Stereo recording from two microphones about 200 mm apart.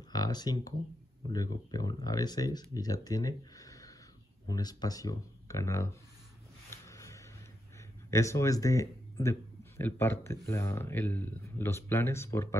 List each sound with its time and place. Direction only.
0.1 s speech: 20° left (ahead or behind)
6.7 s a sound: 15° left (ahead or behind)
8.1 s speech: 15° left (ahead or behind)